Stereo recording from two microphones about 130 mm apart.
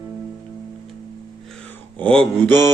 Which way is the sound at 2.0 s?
10° left (ahead or behind).